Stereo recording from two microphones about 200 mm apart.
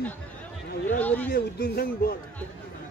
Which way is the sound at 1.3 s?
50° left (ahead or behind).